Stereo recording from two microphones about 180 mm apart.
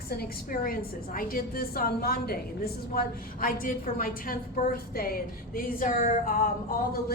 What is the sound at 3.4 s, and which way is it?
A woman's voice, 50° left (ahead or behind).